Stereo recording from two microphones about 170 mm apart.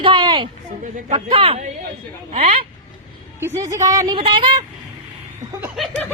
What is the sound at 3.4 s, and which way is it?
A woman's voice, 20° right (ahead or behind).